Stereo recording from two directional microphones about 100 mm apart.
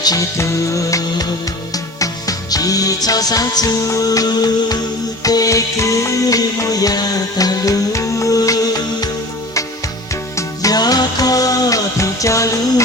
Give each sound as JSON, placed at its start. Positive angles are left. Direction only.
{"t": 0.0, "sound": "music", "side_deg": 40}
{"t": 10.3, "sound": "music", "side_deg": 35}